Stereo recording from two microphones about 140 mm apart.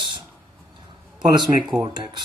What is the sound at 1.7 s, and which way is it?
Speech, 30° right (ahead or behind).